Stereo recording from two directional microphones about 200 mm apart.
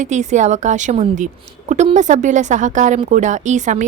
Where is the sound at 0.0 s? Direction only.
35° right (ahead or behind).